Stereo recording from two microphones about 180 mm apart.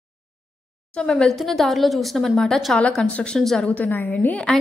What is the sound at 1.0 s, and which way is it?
A woman's voice, 5° left (ahead or behind).